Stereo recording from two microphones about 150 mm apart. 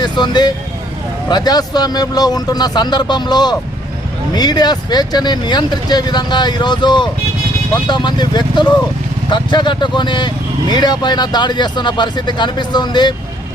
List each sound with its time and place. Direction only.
0.0 s speech: 30° left (ahead or behind)